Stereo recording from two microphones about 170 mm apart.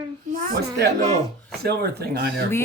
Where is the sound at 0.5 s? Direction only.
85° right.